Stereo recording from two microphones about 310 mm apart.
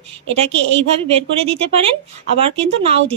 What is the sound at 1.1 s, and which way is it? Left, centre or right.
Speech, centre.